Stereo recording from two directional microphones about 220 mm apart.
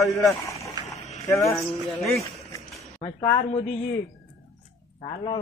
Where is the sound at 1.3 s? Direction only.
15° left (ahead or behind).